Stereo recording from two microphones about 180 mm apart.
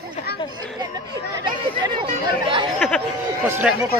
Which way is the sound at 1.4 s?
25° right (ahead or behind).